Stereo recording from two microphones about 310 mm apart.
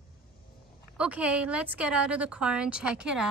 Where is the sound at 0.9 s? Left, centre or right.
Centre.